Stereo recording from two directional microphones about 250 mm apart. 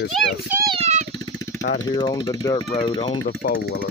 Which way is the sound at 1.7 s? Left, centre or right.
Centre.